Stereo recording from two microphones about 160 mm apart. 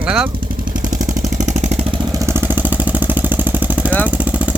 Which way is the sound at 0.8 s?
55° right (ahead or behind).